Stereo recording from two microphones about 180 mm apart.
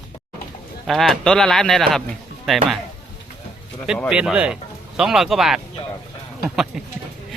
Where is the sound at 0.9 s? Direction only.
Centre (ahead or behind).